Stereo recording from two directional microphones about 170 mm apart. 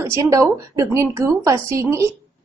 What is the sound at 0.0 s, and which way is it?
A woman's voice, 15° right (ahead or behind).